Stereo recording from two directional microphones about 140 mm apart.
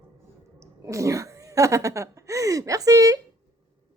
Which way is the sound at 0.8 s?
20° right (ahead or behind).